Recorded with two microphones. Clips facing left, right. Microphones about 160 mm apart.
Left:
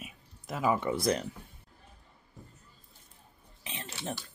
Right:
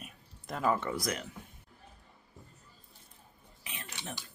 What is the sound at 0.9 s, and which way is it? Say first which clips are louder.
Speech: left 6 dB; 30° left (ahead or behind).